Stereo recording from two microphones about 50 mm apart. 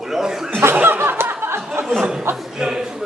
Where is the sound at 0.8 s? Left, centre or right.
Right.